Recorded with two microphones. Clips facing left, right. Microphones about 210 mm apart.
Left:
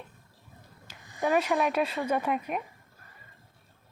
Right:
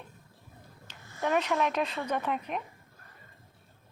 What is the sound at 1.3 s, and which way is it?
A woman's voice, 10° left (ahead or behind).